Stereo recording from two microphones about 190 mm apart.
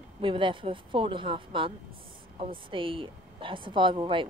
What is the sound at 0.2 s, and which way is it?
Speech, 25° right (ahead or behind).